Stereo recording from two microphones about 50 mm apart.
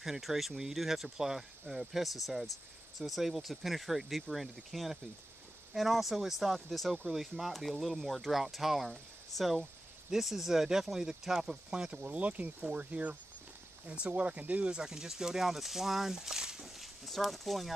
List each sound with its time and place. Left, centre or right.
0.0 s speech: centre
10.1 s speech: centre
12.1 s speech: right
14.8 s speech: centre